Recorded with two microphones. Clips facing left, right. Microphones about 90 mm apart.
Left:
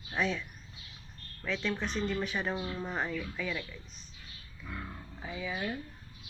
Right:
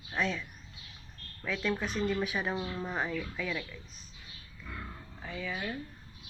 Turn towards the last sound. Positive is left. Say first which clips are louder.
# left 1 dB
turn(degrees=10)  # may be behind; listen again after turning